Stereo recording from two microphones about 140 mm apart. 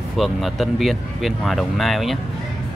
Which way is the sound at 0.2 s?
Centre (ahead or behind).